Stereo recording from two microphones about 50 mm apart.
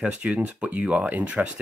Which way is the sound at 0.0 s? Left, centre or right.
Right.